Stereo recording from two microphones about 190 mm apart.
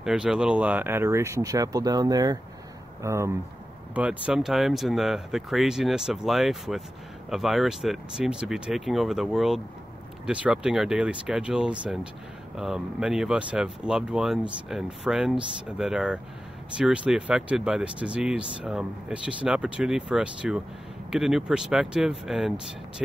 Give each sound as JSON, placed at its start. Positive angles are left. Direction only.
{"t": 0.0, "sound": "speech", "side_deg": 0}